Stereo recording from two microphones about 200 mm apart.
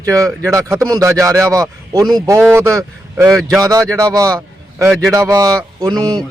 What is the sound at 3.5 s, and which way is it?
A man's voice, 15° right (ahead or behind).